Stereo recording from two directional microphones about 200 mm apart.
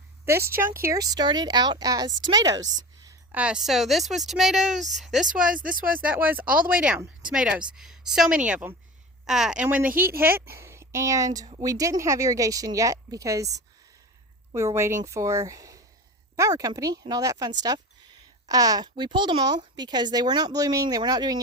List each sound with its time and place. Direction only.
0.3 s a woman's voice: 15° right (ahead or behind)
5.5 s speech: 45° right (ahead or behind)
6.1 s a woman's voice: 10° right (ahead or behind)
10.5 s a sound: 15° right (ahead or behind)
11.3 s speech: 20° right (ahead or behind)